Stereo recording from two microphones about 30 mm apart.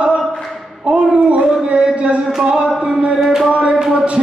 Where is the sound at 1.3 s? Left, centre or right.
Right.